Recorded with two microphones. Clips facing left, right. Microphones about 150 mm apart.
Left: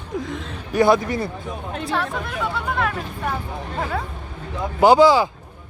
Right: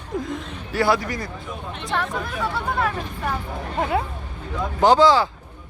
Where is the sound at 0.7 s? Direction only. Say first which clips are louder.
Left 4 dB; 20° left (ahead or behind).